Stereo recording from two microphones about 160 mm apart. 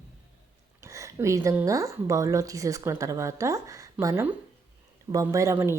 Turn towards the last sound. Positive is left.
turn(degrees=-15)  # may be behind; listen again after turning